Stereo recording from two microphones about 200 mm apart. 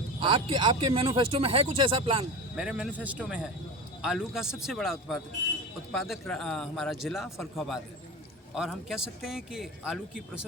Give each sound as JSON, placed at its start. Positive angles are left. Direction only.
{"t": 0.2, "sound": "speech", "side_deg": -25}
{"t": 2.6, "sound": "a man's voice", "side_deg": -5}